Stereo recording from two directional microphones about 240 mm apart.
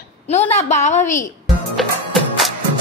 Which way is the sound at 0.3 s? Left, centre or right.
Left.